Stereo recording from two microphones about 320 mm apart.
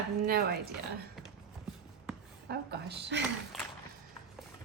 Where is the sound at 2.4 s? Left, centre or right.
Right.